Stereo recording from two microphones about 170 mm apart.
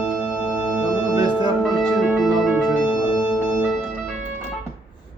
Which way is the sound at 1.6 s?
Centre (ahead or behind).